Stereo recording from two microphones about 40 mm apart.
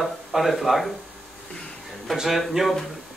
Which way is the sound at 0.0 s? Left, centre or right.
Centre.